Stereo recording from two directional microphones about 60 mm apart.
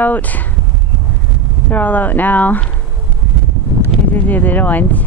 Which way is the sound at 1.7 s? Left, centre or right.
Left.